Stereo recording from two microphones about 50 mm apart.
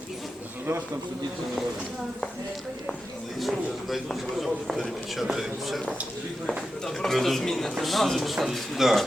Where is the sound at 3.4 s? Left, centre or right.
Centre.